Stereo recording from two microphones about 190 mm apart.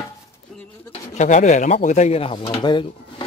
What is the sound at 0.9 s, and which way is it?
Speech, 40° left (ahead or behind).